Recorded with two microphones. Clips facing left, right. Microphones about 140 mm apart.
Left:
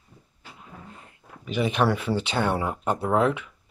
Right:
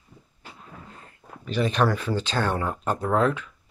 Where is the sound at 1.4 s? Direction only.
15° left (ahead or behind).